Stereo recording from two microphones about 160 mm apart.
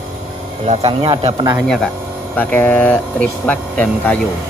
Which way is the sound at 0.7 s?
35° right (ahead or behind).